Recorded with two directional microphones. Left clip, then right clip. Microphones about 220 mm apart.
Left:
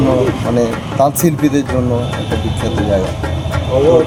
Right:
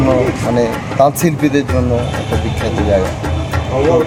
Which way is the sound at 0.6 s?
Centre (ahead or behind).